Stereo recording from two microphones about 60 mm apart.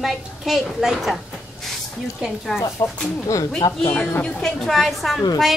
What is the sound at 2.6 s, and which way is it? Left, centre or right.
Speech, left.